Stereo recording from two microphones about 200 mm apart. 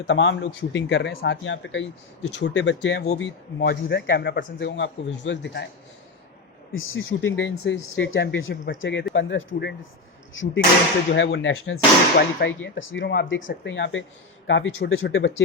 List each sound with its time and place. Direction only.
0.0 s a man's voice: 65° left (ahead or behind)
6.7 s a man's voice: 75° left (ahead or behind)
12.4 s a man's voice: 60° left (ahead or behind)